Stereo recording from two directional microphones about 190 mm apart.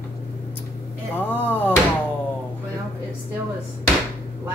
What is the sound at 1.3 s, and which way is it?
Speech, 10° left (ahead or behind).